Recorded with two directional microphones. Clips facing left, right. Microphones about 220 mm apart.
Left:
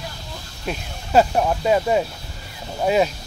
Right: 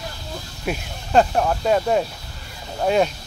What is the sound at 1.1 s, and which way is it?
Speech, 5° left (ahead or behind).